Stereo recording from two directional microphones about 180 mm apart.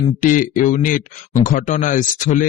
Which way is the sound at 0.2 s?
45° left (ahead or behind).